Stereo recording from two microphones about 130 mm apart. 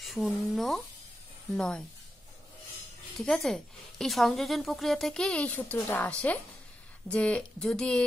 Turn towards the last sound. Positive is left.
turn(degrees=5)  # may be behind; listen again after turning